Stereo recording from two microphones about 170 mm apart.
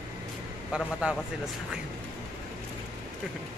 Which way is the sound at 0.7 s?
5° right (ahead or behind).